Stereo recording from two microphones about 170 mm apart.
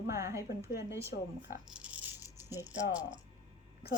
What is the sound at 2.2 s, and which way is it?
Rattle, 20° left (ahead or behind).